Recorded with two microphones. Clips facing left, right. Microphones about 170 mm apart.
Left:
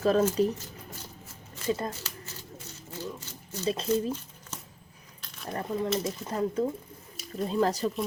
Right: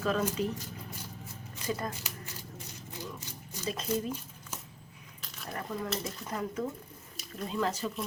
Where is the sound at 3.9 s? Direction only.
10° right (ahead or behind).